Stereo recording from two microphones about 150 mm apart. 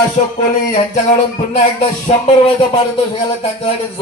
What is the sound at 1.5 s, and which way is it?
Music, 45° left (ahead or behind).